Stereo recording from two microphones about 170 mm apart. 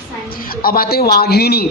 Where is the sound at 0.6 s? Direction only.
60° left (ahead or behind).